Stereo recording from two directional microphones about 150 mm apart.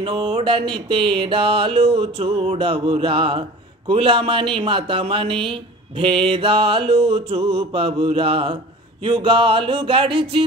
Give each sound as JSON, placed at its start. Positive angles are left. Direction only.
{"t": 0.0, "sound": "music", "side_deg": -35}